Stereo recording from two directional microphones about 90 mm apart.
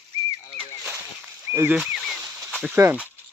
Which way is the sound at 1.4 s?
25° right (ahead or behind).